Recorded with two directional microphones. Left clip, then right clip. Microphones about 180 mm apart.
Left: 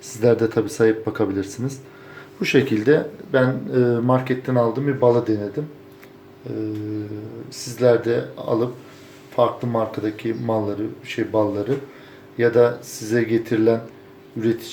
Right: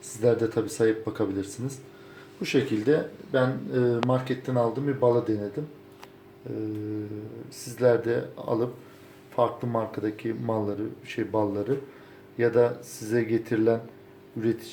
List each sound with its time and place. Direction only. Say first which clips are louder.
0.2 s speech: left 6 dB; centre (ahead or behind)
7.8 s speech: left 5 dB; 5° right (ahead or behind)